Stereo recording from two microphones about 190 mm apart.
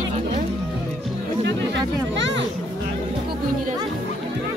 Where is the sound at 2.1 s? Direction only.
70° right (ahead or behind).